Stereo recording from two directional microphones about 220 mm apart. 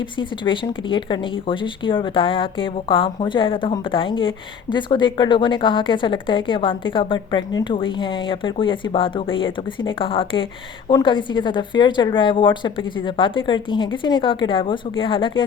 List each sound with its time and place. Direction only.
0.2 s speech: 20° left (ahead or behind)